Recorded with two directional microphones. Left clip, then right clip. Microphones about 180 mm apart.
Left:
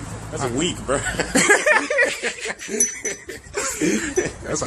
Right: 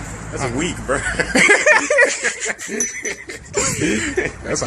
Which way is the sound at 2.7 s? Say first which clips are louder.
Left 3 dB; 45° left (ahead or behind).